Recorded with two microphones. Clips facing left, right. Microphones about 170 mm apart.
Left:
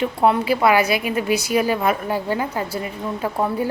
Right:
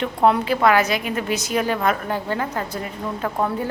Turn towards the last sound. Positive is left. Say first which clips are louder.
# left 2 dB
turn(degrees=10)  # may be behind; listen again after turning